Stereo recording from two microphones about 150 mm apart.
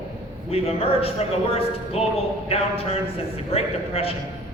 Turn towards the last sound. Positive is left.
turn(degrees=40)  # may be behind; listen again after turning